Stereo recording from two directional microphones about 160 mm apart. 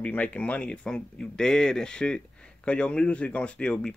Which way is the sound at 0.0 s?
10° left (ahead or behind).